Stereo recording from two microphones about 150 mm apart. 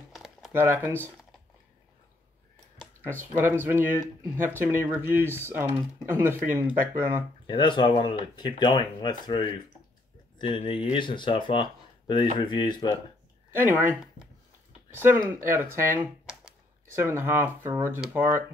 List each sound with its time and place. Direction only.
0.1 s a sound: centre (ahead or behind)
0.5 s speech: 15° right (ahead or behind)
3.2 s speech: 15° right (ahead or behind)
7.4 s speech: 30° left (ahead or behind)
13.5 s speech: 15° right (ahead or behind)
15.0 s speech: 15° right (ahead or behind)
17.1 s speech: 15° right (ahead or behind)